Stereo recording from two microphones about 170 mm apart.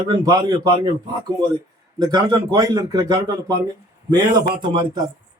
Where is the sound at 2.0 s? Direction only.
25° right (ahead or behind).